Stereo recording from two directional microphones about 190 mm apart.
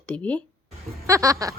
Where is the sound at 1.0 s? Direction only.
15° right (ahead or behind).